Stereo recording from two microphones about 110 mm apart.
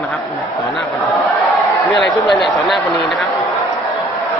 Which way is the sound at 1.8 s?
Centre (ahead or behind).